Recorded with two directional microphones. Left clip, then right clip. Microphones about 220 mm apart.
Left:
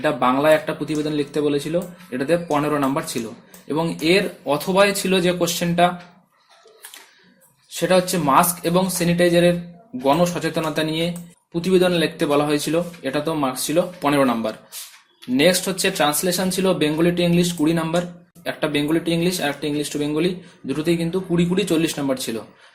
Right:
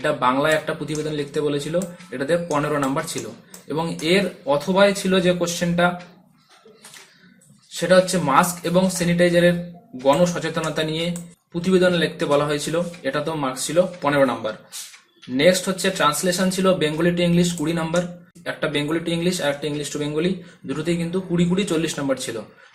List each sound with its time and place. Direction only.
0.0 s speech: 35° left (ahead or behind)
7.8 s speech: 35° left (ahead or behind)